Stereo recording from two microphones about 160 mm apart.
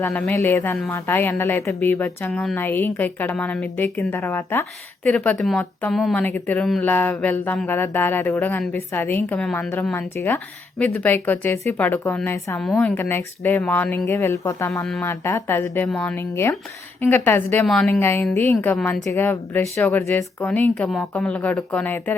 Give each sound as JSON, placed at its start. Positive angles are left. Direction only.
{"t": 0.0, "sound": "a woman's voice", "side_deg": 10}
{"t": 18.0, "sound": "speech", "side_deg": 15}